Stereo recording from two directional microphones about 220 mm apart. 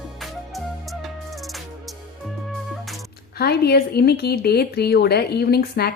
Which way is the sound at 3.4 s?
45° left (ahead or behind).